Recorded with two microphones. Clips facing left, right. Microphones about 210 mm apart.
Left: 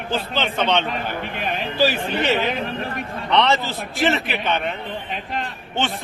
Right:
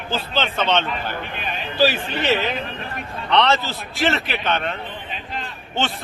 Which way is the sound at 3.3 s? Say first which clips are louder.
Even; 15° left (ahead or behind).